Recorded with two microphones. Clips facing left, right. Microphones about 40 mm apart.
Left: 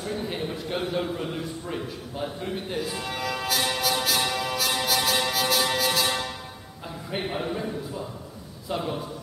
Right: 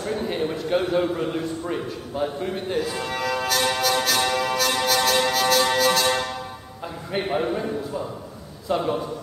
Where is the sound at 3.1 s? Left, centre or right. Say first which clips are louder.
Right 5 dB; centre.